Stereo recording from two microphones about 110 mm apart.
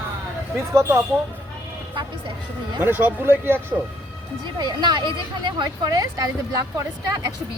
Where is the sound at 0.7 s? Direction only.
25° right (ahead or behind).